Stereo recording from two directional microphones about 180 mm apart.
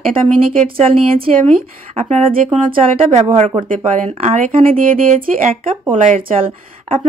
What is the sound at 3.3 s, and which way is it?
Speech, 30° right (ahead or behind).